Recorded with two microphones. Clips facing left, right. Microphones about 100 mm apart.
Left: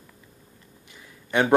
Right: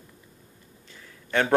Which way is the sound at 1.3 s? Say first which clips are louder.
Left 2 dB; 15° left (ahead or behind).